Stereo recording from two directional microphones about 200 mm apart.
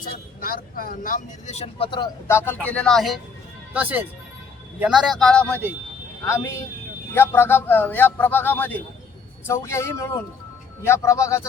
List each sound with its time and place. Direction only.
0.0 s speech: 45° left (ahead or behind); by 2.0 s 30° left (ahead or behind)
2.2 s speech: 10° left (ahead or behind)